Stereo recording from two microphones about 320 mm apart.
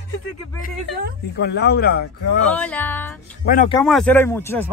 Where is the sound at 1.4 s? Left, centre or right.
Left.